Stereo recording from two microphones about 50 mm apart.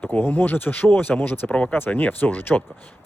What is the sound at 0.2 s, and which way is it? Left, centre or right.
Speech, left.